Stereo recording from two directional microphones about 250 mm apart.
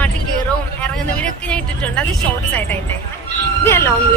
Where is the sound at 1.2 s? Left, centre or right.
Centre.